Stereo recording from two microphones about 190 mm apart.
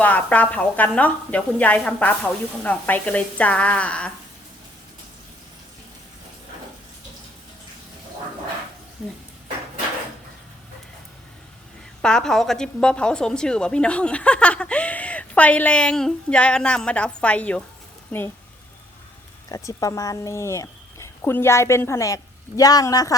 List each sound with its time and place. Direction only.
0.0 s speech: 10° left (ahead or behind)
12.0 s a woman's voice: 5° left (ahead or behind)
19.5 s speech: 20° left (ahead or behind)